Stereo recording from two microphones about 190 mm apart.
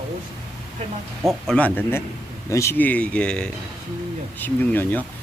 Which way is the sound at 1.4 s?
5° left (ahead or behind).